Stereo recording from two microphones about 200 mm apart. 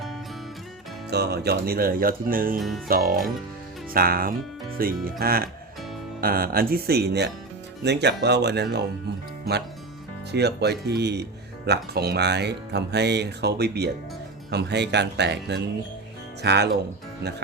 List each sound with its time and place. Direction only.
1.1 s speech: 55° right (ahead or behind)
2.6 s music: centre (ahead or behind)
2.8 s speech: 45° right (ahead or behind)
10.3 s speech: 55° right (ahead or behind)